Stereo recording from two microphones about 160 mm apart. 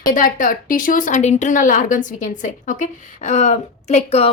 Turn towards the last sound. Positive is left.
turn(degrees=45)  # may be behind; listen again after turning